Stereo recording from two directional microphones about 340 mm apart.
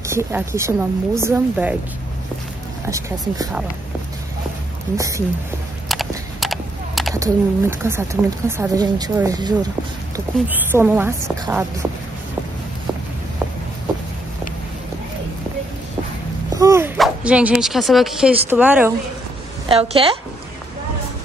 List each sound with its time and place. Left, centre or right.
0.1 s speech: centre
2.9 s speech: centre
4.9 s speech: centre
16.5 s speech: centre
19.7 s speech: centre